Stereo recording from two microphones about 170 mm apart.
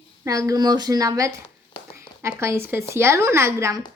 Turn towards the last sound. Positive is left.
turn(degrees=-15)  # may be behind; listen again after turning